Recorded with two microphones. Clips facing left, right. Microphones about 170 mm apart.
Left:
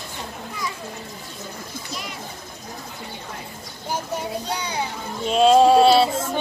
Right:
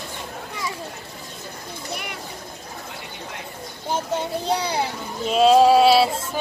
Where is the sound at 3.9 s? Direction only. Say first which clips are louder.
Right 2 dB; 30° right (ahead or behind).